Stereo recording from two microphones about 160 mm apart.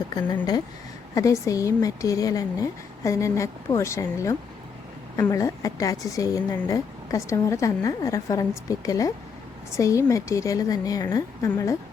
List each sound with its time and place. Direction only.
1.1 s a woman's voice: 20° left (ahead or behind)